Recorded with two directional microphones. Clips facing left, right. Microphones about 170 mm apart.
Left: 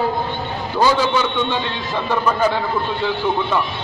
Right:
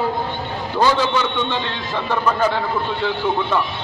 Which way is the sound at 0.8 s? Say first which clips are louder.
Left 1 dB; 10° left (ahead or behind).